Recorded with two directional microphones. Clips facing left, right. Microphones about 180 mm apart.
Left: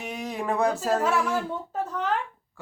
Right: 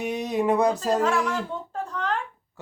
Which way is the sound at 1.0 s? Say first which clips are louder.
Even; 10° left (ahead or behind).